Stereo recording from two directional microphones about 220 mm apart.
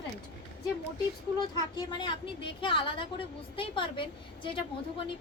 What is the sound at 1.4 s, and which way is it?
A woman's voice, 20° left (ahead or behind).